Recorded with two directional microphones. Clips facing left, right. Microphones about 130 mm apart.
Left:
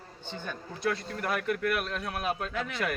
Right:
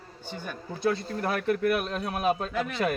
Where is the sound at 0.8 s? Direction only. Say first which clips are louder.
Right 4 dB; 30° right (ahead or behind).